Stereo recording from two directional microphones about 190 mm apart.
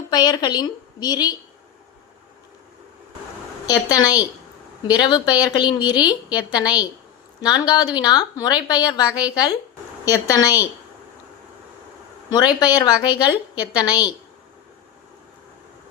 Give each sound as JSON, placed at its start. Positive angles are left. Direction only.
{"t": 0.1, "sound": "a woman's voice", "side_deg": 20}
{"t": 3.7, "sound": "a woman's voice", "side_deg": 20}
{"t": 12.5, "sound": "a woman's voice", "side_deg": 20}